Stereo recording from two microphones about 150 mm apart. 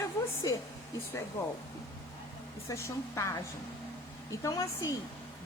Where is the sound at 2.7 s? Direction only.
20° left (ahead or behind).